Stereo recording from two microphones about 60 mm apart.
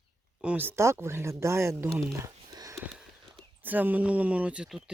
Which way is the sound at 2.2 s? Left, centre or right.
Right.